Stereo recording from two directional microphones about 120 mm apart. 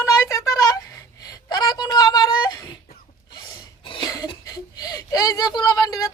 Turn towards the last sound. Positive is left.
turn(degrees=30)  # may be behind; listen again after turning